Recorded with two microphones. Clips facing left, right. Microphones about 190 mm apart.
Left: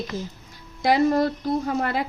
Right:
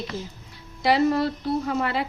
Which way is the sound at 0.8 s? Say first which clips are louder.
Left 1 dB; 45° left (ahead or behind).